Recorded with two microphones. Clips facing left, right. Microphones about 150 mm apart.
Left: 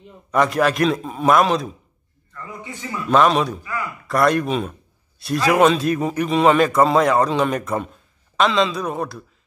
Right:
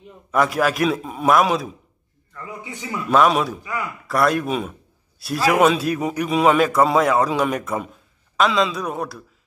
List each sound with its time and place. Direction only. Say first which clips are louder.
0.3 s a man's voice: left 1 dB; centre (ahead or behind)
2.7 s a man's voice: right 1 dB; 15° right (ahead or behind)
3.1 s a man's voice: left 1 dB; centre (ahead or behind)
3.6 s a sound: even; 15° right (ahead or behind)
4.1 s a man's voice: left 2 dB; centre (ahead or behind)